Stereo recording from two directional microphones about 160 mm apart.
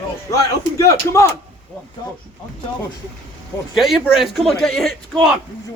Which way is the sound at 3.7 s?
Centre (ahead or behind).